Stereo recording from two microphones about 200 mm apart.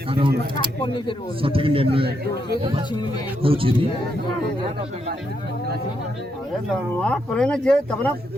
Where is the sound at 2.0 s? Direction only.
55° right (ahead or behind).